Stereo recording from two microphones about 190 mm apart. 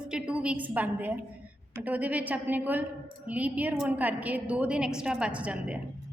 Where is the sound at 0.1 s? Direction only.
5° right (ahead or behind).